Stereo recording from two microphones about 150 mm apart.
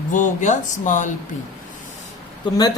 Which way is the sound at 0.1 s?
55° left (ahead or behind).